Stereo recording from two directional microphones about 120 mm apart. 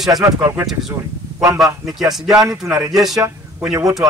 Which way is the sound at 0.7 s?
Centre (ahead or behind).